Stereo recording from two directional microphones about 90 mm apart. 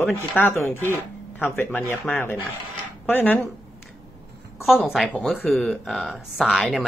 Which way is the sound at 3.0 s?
20° left (ahead or behind).